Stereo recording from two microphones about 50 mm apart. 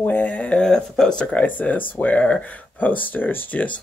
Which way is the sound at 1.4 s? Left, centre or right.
Left.